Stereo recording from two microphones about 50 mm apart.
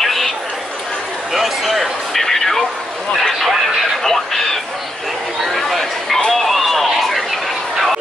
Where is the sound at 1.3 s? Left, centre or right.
Centre.